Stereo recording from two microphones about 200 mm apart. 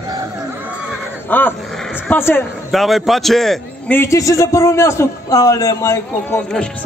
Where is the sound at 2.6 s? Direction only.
Centre (ahead or behind).